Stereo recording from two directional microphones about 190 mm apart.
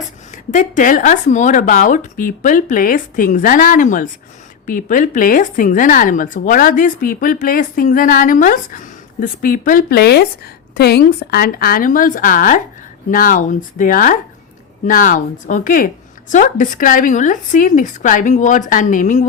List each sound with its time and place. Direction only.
0.5 s speech: 45° left (ahead or behind)